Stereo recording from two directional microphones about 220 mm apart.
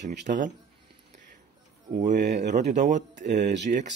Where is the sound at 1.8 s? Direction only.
35° right (ahead or behind).